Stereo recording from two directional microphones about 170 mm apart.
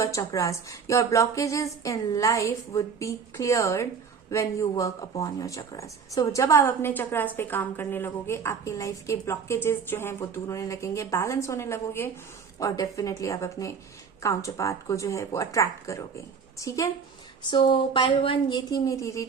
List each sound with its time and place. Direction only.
0.0 s speech: 20° left (ahead or behind)
17.5 s speech: 30° left (ahead or behind)